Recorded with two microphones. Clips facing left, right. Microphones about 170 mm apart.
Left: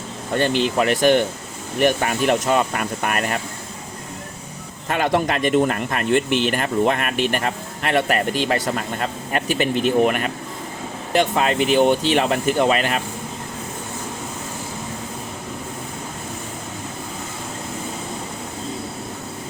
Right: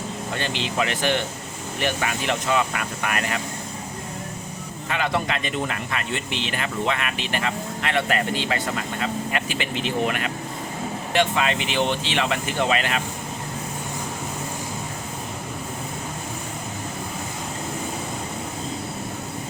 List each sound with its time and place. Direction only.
0.3 s speech: 50° left (ahead or behind)
4.9 s speech: 50° left (ahead or behind)